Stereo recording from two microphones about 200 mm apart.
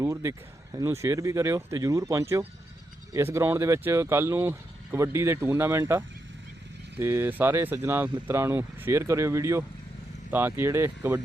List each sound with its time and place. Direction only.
0.0 s speech: 15° right (ahead or behind)